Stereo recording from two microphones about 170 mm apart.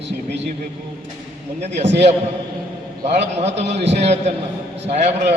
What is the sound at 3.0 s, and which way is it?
A man's voice, 40° right (ahead or behind).